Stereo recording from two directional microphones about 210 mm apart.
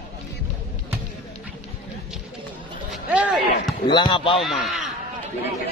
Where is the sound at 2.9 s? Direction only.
5° right (ahead or behind).